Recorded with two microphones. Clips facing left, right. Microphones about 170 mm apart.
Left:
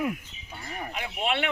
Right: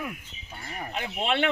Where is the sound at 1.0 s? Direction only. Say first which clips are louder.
Right 2 dB; 35° right (ahead or behind).